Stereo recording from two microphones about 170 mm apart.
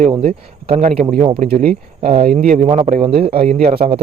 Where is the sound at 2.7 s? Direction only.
35° right (ahead or behind).